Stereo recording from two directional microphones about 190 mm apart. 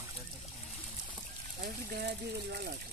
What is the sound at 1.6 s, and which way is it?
Speech, 55° right (ahead or behind).